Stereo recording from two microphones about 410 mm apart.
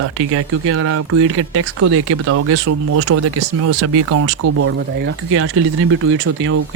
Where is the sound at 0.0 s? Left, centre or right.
Right.